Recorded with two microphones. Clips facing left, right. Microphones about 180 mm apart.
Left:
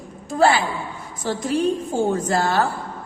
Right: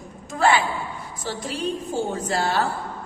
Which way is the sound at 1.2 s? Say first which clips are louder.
Left 7 dB; 50° left (ahead or behind).